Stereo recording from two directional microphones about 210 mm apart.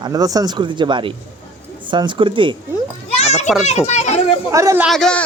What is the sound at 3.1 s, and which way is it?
Children playing, 30° left (ahead or behind).